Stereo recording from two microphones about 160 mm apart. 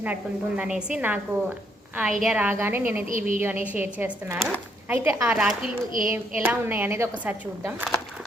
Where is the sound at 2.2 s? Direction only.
5° right (ahead or behind).